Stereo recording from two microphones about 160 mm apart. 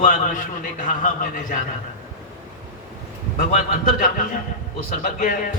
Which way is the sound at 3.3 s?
50° left (ahead or behind).